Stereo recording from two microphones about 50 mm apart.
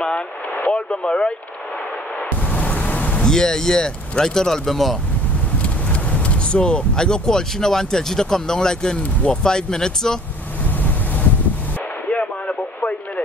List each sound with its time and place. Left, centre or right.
0.6 s speech: left
2.5 s a sound: left
3.3 s speech: centre
6.2 s speech: left
12.1 s radio: left